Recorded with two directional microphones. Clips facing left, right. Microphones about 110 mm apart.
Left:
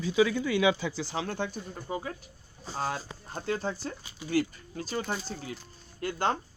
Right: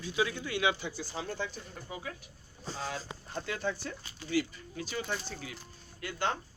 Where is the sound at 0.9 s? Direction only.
90° left; by 1.6 s 60° left (ahead or behind).